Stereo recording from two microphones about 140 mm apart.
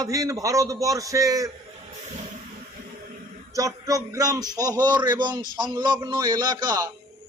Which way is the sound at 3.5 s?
25° right (ahead or behind).